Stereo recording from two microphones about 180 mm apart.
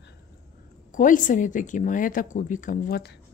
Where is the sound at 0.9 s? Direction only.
45° left (ahead or behind).